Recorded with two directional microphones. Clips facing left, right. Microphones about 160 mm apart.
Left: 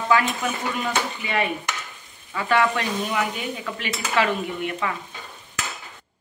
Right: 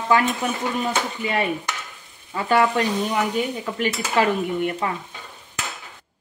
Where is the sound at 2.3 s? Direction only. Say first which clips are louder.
Right 2 dB; 35° right (ahead or behind).